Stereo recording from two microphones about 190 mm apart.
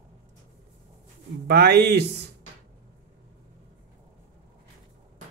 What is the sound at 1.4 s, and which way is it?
Speech, 60° right (ahead or behind).